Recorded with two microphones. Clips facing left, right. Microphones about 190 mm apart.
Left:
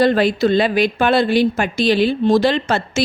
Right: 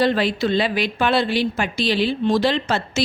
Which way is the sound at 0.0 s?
45° left (ahead or behind).